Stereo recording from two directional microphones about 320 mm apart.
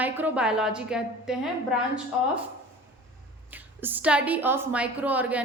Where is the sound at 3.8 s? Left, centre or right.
Centre.